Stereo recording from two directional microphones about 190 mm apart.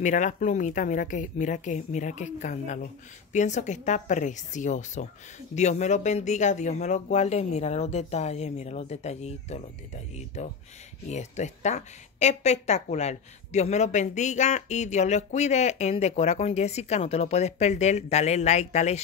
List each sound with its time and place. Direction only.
0.0 s speech: 40° left (ahead or behind)